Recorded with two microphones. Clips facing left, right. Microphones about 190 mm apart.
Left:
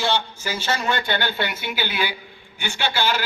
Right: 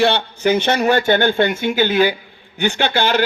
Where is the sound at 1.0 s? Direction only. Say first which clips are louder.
Right 10 dB; 45° right (ahead or behind).